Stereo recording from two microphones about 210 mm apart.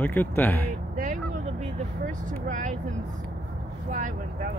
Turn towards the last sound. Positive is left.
turn(degrees=-40)  # may be behind; listen again after turning